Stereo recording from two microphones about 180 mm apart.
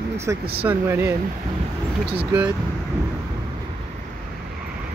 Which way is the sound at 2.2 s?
10° right (ahead or behind).